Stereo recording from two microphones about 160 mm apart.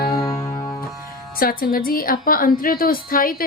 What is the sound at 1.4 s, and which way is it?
A woman's voice, 65° left (ahead or behind).